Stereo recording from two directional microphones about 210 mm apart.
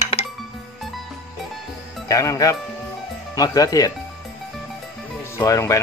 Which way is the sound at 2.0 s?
15° left (ahead or behind).